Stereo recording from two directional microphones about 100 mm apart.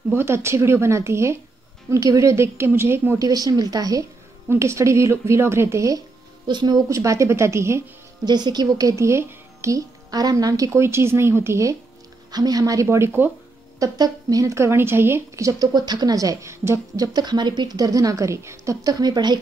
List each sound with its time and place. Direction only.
0.1 s speech: 25° right (ahead or behind)
3.3 s speech: 40° right (ahead or behind)
4.5 s speech: 30° right (ahead or behind)
6.4 s speech: 50° right (ahead or behind)
6.9 s speech: 30° right (ahead or behind)
8.3 s speech: 45° right (ahead or behind); by 11.7 s 30° right (ahead or behind)
12.3 s speech: 40° right (ahead or behind)
12.8 s speech: 25° right (ahead or behind)
13.7 s speech: 40° right (ahead or behind)
17.0 s speech: 45° right (ahead or behind)